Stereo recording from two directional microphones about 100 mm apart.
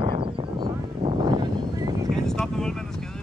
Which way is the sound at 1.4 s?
45° right (ahead or behind).